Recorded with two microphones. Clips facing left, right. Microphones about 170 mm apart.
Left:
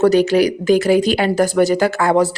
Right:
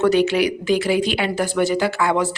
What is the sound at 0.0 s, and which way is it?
A woman's voice, 40° left (ahead or behind).